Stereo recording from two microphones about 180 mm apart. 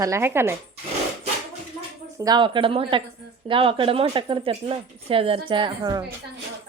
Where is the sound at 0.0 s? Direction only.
15° right (ahead or behind).